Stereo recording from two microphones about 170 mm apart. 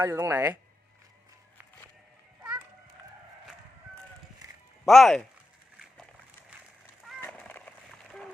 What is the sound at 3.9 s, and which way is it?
Sheep, 20° right (ahead or behind).